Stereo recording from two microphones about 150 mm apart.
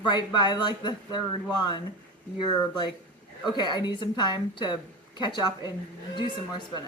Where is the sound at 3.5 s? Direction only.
30° left (ahead or behind).